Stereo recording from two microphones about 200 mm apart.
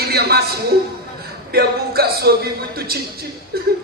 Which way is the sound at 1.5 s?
50° right (ahead or behind).